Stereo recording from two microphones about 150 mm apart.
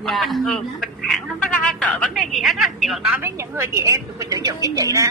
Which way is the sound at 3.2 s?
15° right (ahead or behind).